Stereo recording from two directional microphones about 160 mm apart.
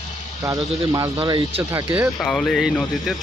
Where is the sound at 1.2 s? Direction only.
35° right (ahead or behind).